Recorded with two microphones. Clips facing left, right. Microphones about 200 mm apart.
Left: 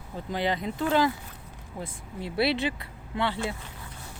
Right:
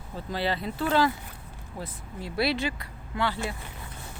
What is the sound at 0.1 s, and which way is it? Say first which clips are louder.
Speech: left 1 dB; 15° left (ahead or behind).